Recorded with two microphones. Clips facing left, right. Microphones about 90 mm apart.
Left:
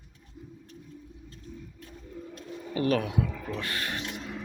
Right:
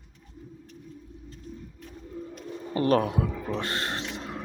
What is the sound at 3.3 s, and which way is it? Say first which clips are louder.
Speech: right 4 dB; 25° right (ahead or behind).